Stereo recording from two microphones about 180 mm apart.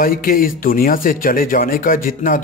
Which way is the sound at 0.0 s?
50° left (ahead or behind).